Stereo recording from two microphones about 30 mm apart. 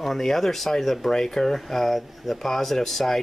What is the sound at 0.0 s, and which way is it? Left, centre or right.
Speech, centre.